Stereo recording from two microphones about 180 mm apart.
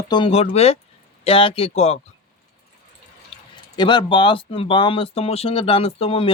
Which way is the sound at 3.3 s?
25° left (ahead or behind).